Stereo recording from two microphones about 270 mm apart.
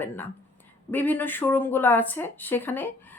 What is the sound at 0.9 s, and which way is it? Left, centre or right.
Speech, centre.